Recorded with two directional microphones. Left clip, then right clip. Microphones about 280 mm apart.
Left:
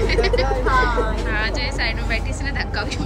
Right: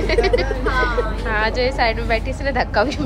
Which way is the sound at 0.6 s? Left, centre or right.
Centre.